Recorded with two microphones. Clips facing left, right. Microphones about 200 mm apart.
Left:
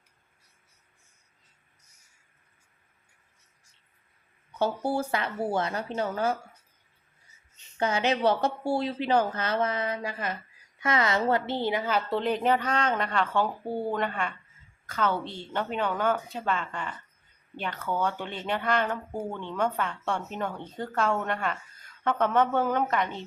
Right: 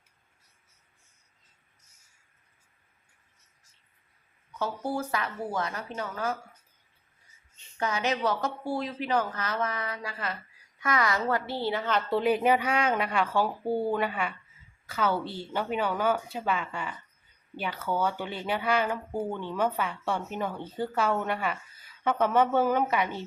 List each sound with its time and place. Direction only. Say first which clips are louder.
4.5 s speech: left 4 dB; 30° left (ahead or behind)
7.8 s a woman's voice: left 3 dB; 30° left (ahead or behind); by 12.2 s 5° left (ahead or behind)
12.2 s a woman's voice: right 4 dB; 10° right (ahead or behind)